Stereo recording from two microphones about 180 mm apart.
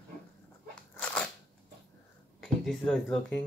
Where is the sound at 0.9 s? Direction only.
10° left (ahead or behind).